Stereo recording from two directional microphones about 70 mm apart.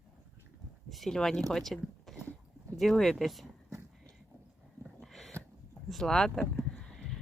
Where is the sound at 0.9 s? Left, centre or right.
Centre.